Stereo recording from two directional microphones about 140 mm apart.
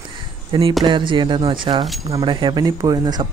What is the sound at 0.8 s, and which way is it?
Speech, 35° right (ahead or behind).